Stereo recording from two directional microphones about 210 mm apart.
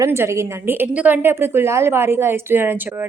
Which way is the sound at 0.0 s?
15° right (ahead or behind).